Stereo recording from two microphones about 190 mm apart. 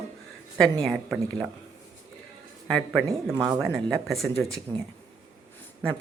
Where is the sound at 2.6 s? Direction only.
Centre (ahead or behind).